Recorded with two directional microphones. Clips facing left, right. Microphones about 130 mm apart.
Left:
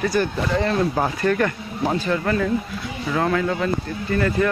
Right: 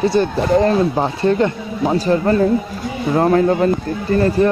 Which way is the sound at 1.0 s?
25° right (ahead or behind).